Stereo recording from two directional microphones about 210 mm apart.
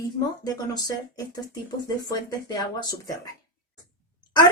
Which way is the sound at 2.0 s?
20° left (ahead or behind).